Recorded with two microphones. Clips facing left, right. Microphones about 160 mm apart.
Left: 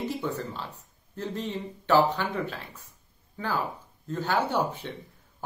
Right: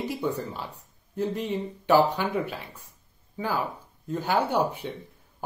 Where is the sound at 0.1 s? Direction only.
15° right (ahead or behind).